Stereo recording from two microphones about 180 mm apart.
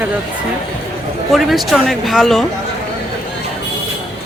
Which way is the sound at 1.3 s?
Centre (ahead or behind).